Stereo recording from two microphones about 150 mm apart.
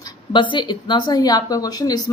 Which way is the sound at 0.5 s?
30° left (ahead or behind).